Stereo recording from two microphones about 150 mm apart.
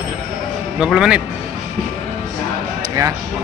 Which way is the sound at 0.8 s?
5° right (ahead or behind).